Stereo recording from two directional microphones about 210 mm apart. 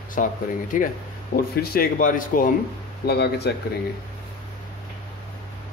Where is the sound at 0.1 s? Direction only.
40° left (ahead or behind).